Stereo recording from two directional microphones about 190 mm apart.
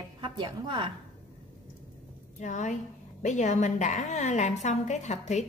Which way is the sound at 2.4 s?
40° left (ahead or behind).